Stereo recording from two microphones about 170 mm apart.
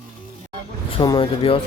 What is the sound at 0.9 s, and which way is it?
Speech, 30° left (ahead or behind).